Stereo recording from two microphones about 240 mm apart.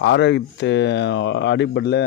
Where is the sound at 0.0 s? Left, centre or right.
Left.